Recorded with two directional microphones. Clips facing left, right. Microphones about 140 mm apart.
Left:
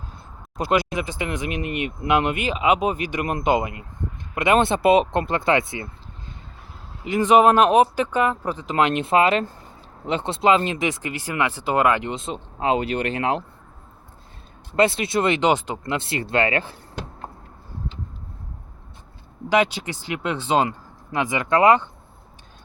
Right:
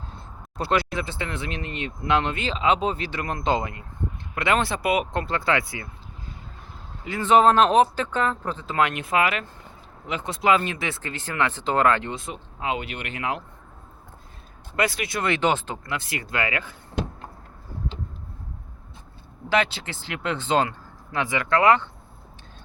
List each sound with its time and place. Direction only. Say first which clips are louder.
0.5 s speech: left 3 dB; 15° left (ahead or behind)
7.0 s speech: left 2 dB; 15° left (ahead or behind)
12.5 s speech: left 8 dB; 35° left (ahead or behind)
14.8 s speech: left 6 dB; 25° left (ahead or behind)
19.5 s speech: left 4 dB; 15° left (ahead or behind)